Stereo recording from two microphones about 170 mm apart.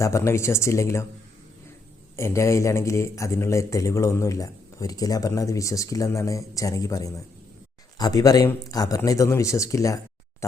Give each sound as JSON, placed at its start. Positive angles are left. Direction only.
{"t": 0.0, "sound": "speech", "side_deg": 15}
{"t": 2.1, "sound": "speech", "side_deg": 15}